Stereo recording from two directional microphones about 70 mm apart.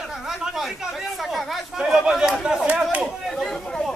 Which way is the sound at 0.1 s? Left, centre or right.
Centre.